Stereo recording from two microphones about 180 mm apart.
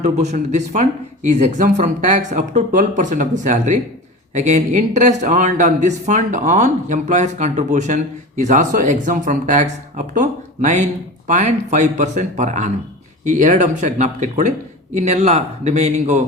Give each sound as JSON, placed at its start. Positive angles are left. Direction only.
{"t": 0.0, "sound": "speech", "side_deg": -40}